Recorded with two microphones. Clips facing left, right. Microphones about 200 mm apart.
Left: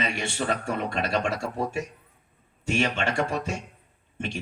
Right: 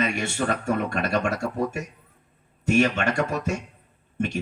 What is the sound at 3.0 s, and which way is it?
Speech, 40° right (ahead or behind).